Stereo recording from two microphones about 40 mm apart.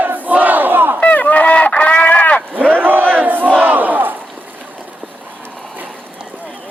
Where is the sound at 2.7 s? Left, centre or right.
Right.